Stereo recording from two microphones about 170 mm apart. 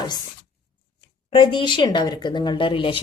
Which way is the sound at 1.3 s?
30° left (ahead or behind).